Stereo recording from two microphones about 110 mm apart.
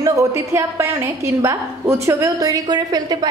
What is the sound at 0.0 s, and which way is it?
A woman's voice, 30° right (ahead or behind).